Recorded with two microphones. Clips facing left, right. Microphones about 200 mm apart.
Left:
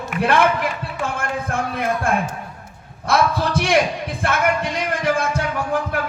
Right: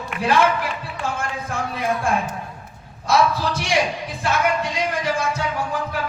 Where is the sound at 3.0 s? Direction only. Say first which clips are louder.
Even; 55° left (ahead or behind).